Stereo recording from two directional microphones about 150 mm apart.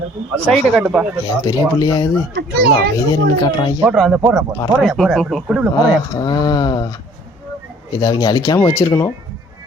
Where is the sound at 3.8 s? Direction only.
5° right (ahead or behind).